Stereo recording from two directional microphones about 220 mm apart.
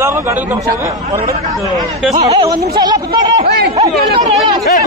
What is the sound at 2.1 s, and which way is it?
Speech, 15° right (ahead or behind).